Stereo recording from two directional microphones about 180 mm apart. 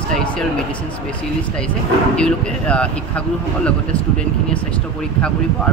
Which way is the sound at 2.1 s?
5° left (ahead or behind).